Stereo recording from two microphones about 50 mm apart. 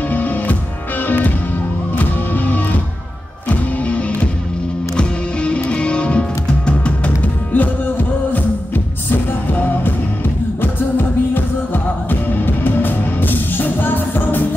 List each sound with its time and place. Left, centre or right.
0.1 s music: left
7.5 s music: left